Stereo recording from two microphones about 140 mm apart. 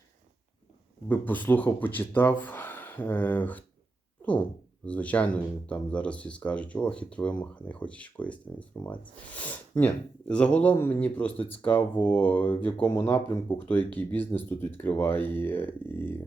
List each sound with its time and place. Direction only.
1.0 s speech: 10° left (ahead or behind)
4.9 s speech: 10° left (ahead or behind)